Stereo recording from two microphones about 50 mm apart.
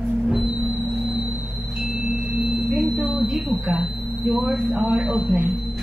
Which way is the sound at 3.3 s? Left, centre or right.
Right.